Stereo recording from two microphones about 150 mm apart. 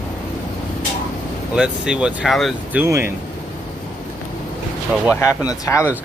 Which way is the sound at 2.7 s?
15° right (ahead or behind).